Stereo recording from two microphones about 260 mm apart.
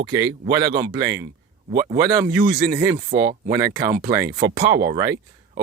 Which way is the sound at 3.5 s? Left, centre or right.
Centre.